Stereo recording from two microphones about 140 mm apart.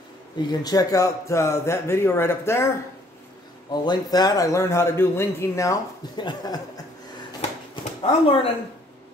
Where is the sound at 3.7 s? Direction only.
30° left (ahead or behind).